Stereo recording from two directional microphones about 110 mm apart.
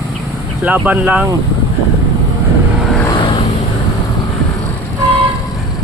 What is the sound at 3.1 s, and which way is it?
Vehicle, 50° left (ahead or behind).